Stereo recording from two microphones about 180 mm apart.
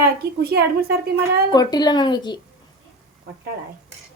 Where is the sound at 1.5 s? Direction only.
20° left (ahead or behind).